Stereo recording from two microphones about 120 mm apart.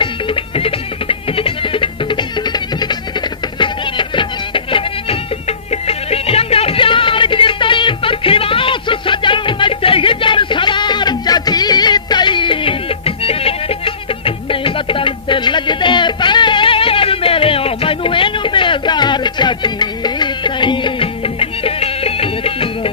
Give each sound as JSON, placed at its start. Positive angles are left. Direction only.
{"t": 0.6, "sound": "music", "side_deg": 50}
{"t": 5.9, "sound": "music", "side_deg": 55}